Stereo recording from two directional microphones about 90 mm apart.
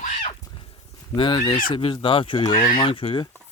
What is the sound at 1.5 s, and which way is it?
Speech, 75° left (ahead or behind).